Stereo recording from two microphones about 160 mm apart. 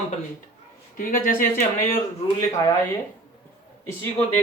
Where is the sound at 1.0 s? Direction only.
60° left (ahead or behind).